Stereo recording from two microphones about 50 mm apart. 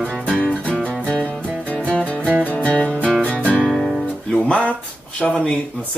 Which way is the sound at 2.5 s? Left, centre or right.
Left.